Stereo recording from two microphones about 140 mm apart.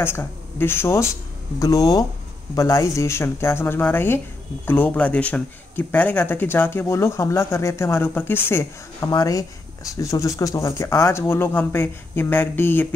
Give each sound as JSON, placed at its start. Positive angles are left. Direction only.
{"t": 0.0, "sound": "speech", "side_deg": 15}